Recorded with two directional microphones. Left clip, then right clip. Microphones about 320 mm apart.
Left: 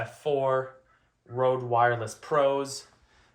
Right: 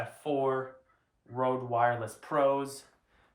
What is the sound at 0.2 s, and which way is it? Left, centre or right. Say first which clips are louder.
Speech: left 5 dB; centre.